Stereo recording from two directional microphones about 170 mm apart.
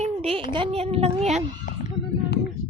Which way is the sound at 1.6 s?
55° left (ahead or behind).